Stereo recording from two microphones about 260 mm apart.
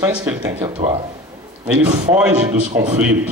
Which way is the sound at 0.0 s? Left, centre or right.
Centre.